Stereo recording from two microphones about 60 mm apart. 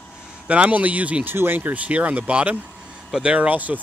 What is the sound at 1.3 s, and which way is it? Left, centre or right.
Speech, right.